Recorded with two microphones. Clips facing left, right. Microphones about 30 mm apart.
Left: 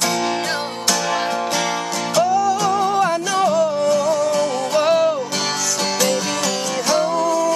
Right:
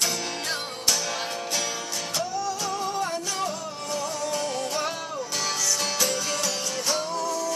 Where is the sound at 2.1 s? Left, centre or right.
Left.